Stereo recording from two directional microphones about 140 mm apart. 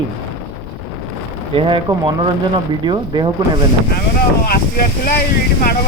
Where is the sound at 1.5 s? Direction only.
35° right (ahead or behind).